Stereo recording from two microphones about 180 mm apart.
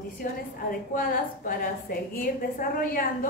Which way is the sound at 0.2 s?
55° left (ahead or behind).